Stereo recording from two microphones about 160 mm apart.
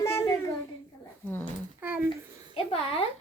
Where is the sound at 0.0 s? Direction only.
15° left (ahead or behind).